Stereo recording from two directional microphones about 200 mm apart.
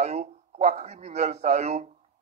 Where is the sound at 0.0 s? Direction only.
35° right (ahead or behind).